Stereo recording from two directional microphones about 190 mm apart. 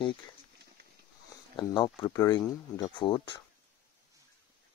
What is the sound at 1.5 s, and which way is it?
Speech, 20° left (ahead or behind).